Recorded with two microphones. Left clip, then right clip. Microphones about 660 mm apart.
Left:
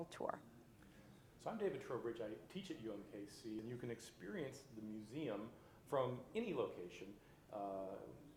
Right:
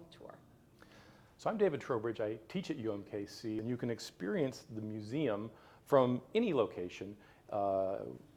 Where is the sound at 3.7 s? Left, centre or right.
Right.